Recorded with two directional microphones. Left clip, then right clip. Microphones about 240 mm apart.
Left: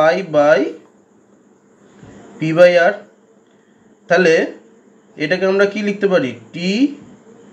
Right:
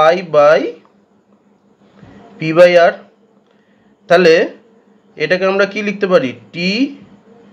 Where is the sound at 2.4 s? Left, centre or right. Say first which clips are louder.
Right 3 dB; right.